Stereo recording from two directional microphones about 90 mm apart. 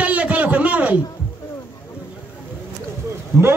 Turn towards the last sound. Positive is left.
turn(degrees=-30)  # may be behind; listen again after turning